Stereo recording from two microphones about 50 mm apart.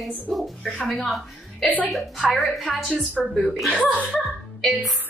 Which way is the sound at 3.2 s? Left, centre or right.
Left.